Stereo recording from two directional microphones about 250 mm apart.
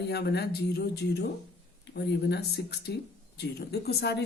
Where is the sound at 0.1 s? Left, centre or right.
Left.